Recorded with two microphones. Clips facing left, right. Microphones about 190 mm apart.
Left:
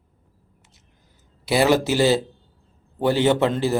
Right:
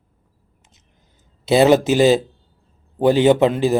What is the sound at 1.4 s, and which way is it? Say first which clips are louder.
A man's voice: right 5 dB; 20° right (ahead or behind).